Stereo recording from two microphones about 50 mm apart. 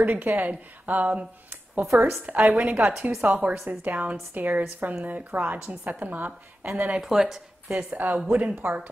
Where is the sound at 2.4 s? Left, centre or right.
Right.